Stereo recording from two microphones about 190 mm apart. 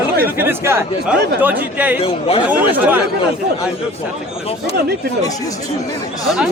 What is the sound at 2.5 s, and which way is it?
Speech, 10° right (ahead or behind).